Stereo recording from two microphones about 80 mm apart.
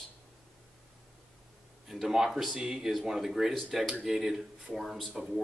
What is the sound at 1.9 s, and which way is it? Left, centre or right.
Speech, centre.